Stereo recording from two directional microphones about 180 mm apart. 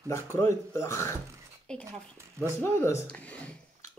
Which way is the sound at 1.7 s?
5° left (ahead or behind).